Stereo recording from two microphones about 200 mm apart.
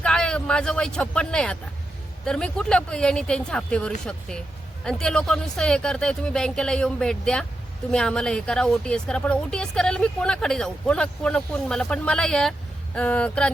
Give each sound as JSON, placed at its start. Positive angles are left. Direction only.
{"t": 0.0, "sound": "a woman's voice", "side_deg": 5}